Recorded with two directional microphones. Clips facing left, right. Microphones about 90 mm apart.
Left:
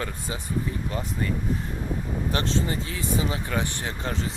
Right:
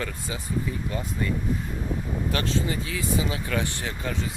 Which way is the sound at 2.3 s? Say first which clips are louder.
Left 1 dB; 30° left (ahead or behind).